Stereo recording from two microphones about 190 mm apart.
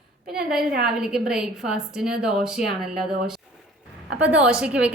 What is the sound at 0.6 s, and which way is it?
Speech, 50° right (ahead or behind).